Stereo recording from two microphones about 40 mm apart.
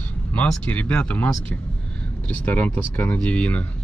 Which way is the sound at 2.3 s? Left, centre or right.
Left.